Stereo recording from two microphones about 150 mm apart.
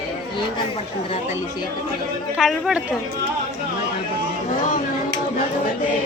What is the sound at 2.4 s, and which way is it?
Speech, centre (ahead or behind).